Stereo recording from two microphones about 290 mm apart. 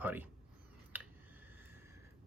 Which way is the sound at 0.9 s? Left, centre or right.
Centre.